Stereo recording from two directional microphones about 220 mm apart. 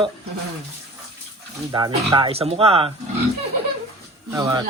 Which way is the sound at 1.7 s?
20° right (ahead or behind).